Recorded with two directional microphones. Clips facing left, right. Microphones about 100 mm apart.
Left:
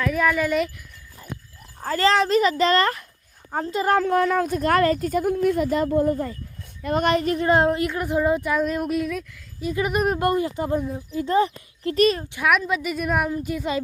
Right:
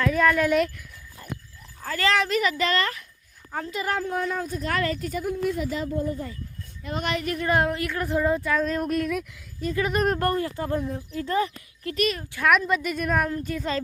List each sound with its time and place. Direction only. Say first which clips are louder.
0.0 s speech: even; 5° left (ahead or behind)
1.8 s a child's voice: left 4 dB; 35° left (ahead or behind)
4.0 s speech: left 7 dB; 85° left
4.7 s speech: left 7 dB; 45° left (ahead or behind)
5.9 s a woman's voice: left 7 dB; 60° left (ahead or behind); by 9.7 s centre (ahead or behind)
9.7 s a woman's voice: left 1 dB; 15° left (ahead or behind)
10.8 s a woman's voice: left 2 dB; 5° left (ahead or behind)
11.2 s a woman's voice: left 5 dB; 25° left (ahead or behind)
12.5 s a woman's voice: even; centre (ahead or behind)